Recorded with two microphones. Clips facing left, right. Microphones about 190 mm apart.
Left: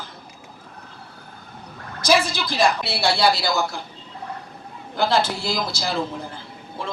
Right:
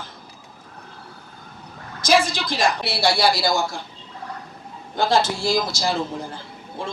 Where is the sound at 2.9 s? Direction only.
60° left (ahead or behind).